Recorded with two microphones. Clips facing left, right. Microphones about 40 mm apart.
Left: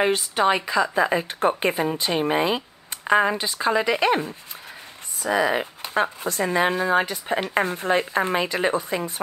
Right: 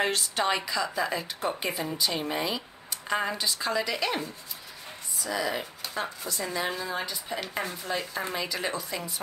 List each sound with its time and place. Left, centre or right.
0.0 s a woman's voice: centre
0.9 s speech: left